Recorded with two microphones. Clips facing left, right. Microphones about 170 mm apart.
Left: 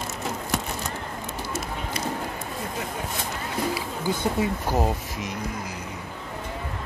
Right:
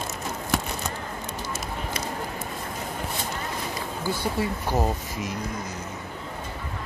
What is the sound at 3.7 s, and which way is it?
Speech, 20° left (ahead or behind).